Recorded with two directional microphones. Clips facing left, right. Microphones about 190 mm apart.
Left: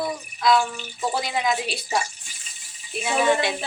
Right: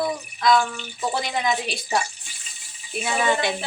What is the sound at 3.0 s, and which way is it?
Speech, centre (ahead or behind).